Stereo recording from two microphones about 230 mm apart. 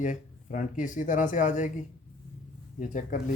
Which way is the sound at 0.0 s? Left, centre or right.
Left.